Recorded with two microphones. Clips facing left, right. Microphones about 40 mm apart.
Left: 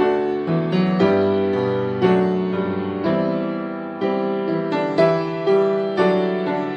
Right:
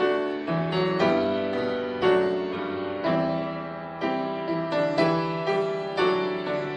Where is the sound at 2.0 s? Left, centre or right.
Left.